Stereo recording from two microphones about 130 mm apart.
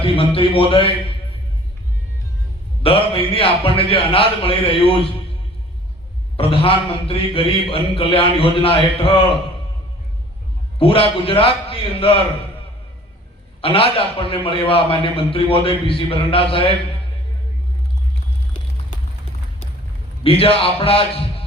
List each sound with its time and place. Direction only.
0.0 s a man's voice: 45° left (ahead or behind)
2.8 s a man's voice: 45° left (ahead or behind)
6.3 s a man's voice: 45° left (ahead or behind)
10.8 s a man's voice: 45° left (ahead or behind)
13.6 s a man's voice: 45° left (ahead or behind)
20.2 s a man's voice: 45° left (ahead or behind)